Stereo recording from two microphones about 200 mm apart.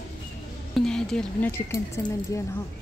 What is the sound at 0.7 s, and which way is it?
Speech, 5° left (ahead or behind).